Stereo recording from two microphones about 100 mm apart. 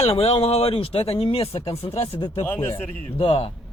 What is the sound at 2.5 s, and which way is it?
Speech, 20° left (ahead or behind).